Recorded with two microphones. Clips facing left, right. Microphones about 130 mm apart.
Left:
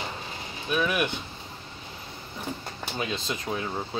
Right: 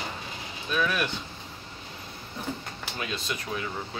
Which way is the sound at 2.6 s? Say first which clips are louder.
Left 3 dB; 25° left (ahead or behind).